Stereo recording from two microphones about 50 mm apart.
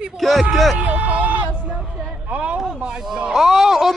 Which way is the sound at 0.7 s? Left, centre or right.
Right.